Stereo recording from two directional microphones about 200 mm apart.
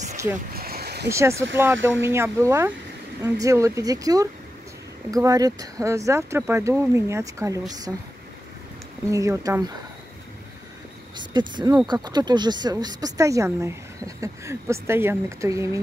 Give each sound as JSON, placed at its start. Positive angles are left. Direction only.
{"t": 0.5, "sound": "a sound", "side_deg": -50}
{"t": 1.1, "sound": "speech", "side_deg": -15}
{"t": 9.1, "sound": "speech", "side_deg": -15}
{"t": 11.1, "sound": "speech", "side_deg": -20}